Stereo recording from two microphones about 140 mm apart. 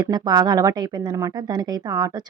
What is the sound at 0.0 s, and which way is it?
Speech, 30° right (ahead or behind).